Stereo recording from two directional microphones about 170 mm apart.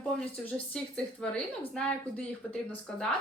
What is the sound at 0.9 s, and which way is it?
Speech, 5° left (ahead or behind).